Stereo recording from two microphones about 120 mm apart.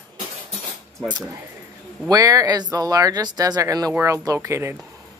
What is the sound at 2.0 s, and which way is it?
Speech, 30° right (ahead or behind).